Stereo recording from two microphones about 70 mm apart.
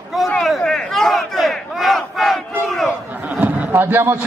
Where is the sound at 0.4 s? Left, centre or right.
Centre.